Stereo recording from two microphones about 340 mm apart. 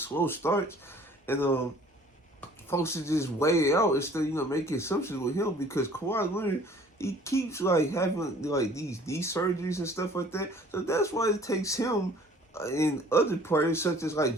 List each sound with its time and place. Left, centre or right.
0.0 s speech: centre
2.6 s speech: centre